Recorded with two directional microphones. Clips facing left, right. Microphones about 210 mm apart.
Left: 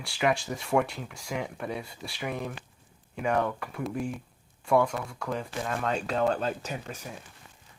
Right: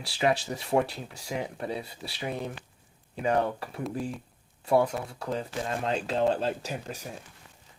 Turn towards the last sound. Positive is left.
turn(degrees=-35)  # may be behind; listen again after turning